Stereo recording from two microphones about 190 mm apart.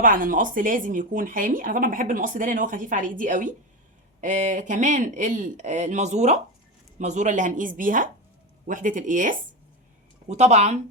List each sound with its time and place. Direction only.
0.0 s speech: 45° right (ahead or behind)